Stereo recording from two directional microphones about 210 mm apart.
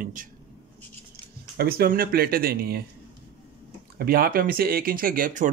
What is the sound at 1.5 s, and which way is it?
Speech, 50° right (ahead or behind).